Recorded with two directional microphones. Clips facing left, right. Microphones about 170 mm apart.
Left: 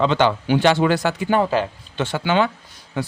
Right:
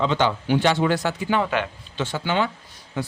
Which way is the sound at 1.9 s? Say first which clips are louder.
Left 4 dB; 70° left (ahead or behind).